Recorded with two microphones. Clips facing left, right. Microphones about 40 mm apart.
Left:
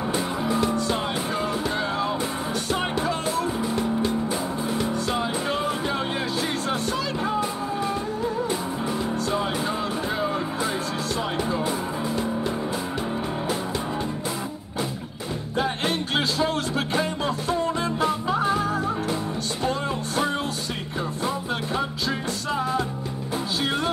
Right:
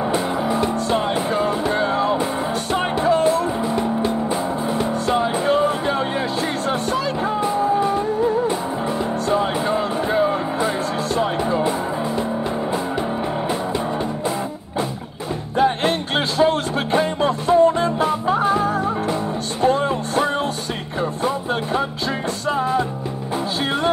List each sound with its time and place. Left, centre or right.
0.1 s music: right
0.8 s music: right
3.6 s music: right
9.3 s music: right
15.5 s music: right